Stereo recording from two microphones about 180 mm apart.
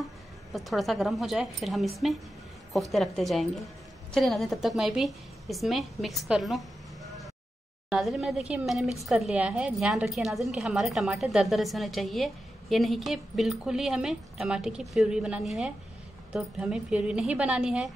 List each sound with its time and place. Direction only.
0.5 s a woman's voice: centre (ahead or behind)
7.9 s a woman's voice: centre (ahead or behind)